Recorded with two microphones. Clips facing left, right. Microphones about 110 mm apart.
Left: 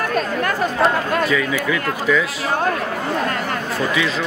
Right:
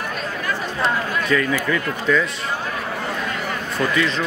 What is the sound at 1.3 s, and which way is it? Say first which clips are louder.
Speech: even; 5° left (ahead or behind).